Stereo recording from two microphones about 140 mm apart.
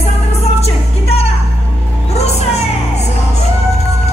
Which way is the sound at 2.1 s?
50° left (ahead or behind).